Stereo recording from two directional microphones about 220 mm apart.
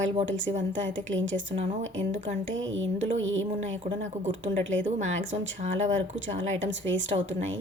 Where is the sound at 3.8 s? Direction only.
30° right (ahead or behind).